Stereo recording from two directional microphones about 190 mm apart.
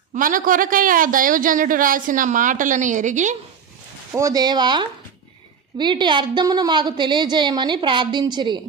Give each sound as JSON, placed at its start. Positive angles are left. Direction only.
{"t": 0.1, "sound": "a man's voice", "side_deg": -45}
{"t": 4.1, "sound": "a woman's voice", "side_deg": -15}